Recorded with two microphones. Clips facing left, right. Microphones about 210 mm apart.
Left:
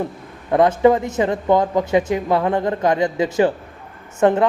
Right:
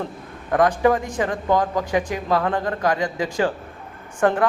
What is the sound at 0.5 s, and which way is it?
A man's voice, 20° left (ahead or behind).